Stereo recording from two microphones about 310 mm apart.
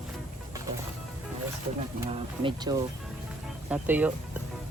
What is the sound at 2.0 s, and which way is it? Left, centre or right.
Speech, centre.